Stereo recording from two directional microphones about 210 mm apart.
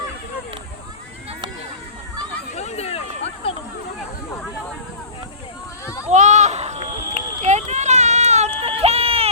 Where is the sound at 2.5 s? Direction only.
30° left (ahead or behind).